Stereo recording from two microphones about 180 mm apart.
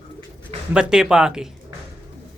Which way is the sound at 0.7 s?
5° right (ahead or behind).